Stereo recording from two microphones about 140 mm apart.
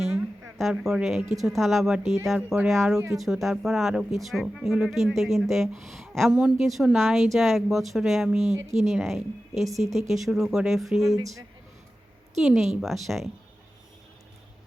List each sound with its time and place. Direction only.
0.1 s a sound: 15° right (ahead or behind)
0.6 s speech: 5° right (ahead or behind)
8.6 s speech: 55° right (ahead or behind)
8.9 s speech: 5° right (ahead or behind)
12.4 s speech: centre (ahead or behind)